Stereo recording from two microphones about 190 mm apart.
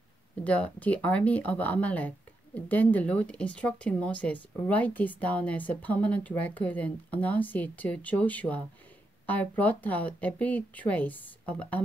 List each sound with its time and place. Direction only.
0.4 s speech: 5° left (ahead or behind)